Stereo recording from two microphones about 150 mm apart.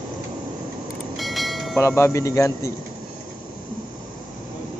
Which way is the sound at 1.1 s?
Centre (ahead or behind).